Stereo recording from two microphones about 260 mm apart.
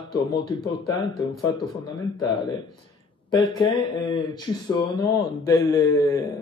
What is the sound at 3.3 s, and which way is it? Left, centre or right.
Speech, centre.